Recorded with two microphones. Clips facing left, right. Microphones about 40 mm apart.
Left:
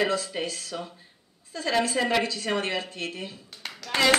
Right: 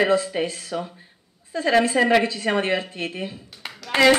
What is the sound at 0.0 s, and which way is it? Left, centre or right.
Speech, right.